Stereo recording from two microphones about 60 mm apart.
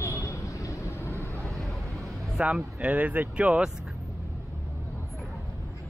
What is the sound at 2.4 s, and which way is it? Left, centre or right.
Speech, centre.